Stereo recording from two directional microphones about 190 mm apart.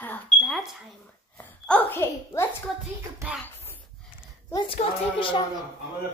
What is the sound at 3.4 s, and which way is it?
Dog, 10° left (ahead or behind).